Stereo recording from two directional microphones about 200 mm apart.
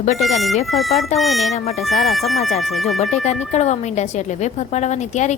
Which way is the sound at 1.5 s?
30° left (ahead or behind).